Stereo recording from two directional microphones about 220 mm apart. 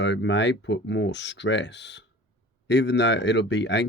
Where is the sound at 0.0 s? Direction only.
55° left (ahead or behind).